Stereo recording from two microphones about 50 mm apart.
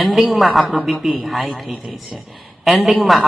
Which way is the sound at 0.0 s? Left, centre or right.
Centre.